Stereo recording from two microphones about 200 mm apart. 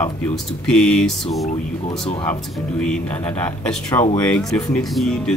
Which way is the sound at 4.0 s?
25° left (ahead or behind).